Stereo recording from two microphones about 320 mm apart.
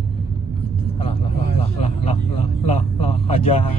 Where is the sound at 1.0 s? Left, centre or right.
Centre.